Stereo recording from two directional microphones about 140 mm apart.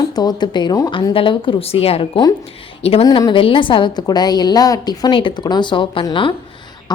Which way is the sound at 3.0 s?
30° left (ahead or behind).